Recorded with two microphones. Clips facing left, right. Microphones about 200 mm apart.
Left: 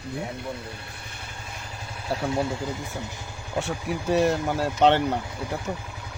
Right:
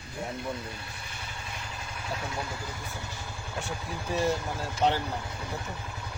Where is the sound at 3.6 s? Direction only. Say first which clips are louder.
Left 8 dB; 75° left (ahead or behind).